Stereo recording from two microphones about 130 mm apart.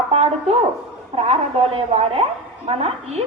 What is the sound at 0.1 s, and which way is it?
A woman's voice, 50° right (ahead or behind).